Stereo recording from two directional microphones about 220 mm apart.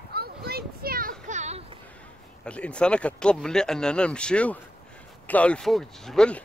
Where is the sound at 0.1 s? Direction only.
45° right (ahead or behind).